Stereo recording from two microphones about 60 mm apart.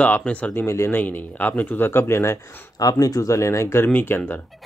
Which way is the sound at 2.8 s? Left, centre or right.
Left.